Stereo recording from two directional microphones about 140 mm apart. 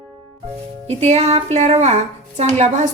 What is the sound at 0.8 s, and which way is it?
A woman's voice, 50° right (ahead or behind).